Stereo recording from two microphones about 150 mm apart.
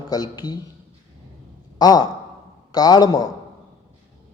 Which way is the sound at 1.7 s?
25° left (ahead or behind).